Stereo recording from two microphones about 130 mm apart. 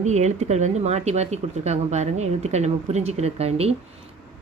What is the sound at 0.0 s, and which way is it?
Speech, 60° right (ahead or behind).